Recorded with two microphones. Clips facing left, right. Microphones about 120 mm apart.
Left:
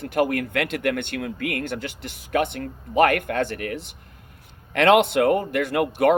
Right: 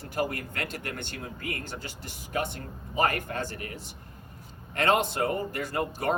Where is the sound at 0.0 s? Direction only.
70° left (ahead or behind).